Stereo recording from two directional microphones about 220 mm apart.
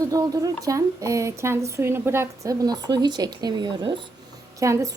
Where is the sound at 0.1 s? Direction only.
15° right (ahead or behind).